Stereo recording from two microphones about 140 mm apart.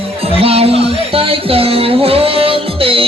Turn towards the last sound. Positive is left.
turn(degrees=-40)  # may be behind; listen again after turning